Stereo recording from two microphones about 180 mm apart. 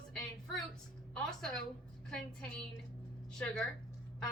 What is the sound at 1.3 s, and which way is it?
Speech, 5° left (ahead or behind).